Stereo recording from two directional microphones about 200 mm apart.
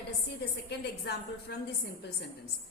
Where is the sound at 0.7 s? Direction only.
55° left (ahead or behind).